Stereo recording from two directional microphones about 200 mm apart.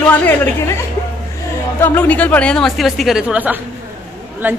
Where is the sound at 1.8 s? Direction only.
10° left (ahead or behind).